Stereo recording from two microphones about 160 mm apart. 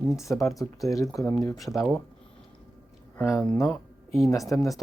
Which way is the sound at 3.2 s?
20° left (ahead or behind).